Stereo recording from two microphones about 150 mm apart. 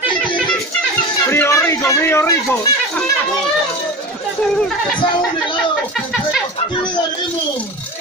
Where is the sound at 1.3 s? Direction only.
15° left (ahead or behind).